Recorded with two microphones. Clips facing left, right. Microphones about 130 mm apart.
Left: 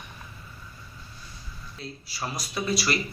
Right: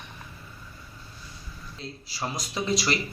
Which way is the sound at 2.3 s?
20° right (ahead or behind).